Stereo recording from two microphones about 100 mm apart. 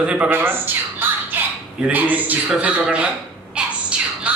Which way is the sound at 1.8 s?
15° right (ahead or behind).